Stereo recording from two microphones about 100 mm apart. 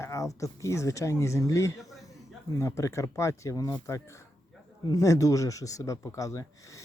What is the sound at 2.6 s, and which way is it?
Speech, 30° left (ahead or behind).